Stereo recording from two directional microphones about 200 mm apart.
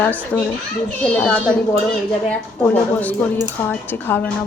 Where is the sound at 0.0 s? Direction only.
10° left (ahead or behind).